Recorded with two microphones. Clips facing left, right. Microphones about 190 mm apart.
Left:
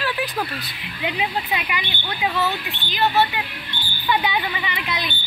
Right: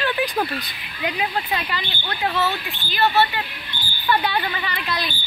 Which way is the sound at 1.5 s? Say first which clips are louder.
Even; 15° left (ahead or behind).